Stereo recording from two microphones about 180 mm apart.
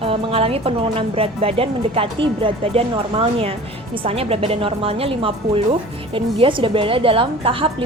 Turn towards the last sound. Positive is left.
turn(degrees=-30)  # may be behind; listen again after turning